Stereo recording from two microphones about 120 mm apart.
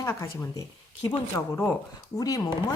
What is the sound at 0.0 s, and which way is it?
Speech, 25° left (ahead or behind).